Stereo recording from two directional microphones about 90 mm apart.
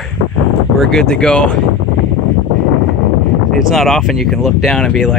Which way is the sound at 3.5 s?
Centre (ahead or behind).